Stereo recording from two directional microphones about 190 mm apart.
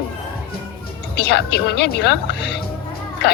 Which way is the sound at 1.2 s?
60° left (ahead or behind).